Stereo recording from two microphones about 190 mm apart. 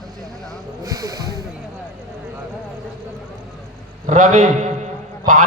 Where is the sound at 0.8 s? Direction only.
20° right (ahead or behind).